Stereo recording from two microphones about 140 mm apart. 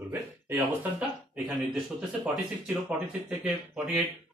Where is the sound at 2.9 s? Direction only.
10° right (ahead or behind).